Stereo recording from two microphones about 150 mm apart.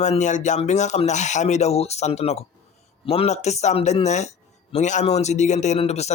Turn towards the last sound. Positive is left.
turn(degrees=45)  # may be behind; listen again after turning